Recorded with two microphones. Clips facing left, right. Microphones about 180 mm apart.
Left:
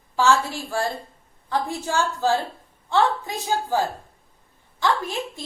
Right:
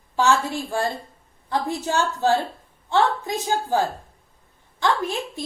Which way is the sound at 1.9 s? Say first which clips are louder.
Right 1 dB; 20° right (ahead or behind).